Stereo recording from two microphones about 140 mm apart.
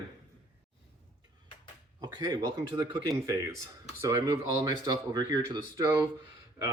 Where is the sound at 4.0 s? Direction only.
20° right (ahead or behind).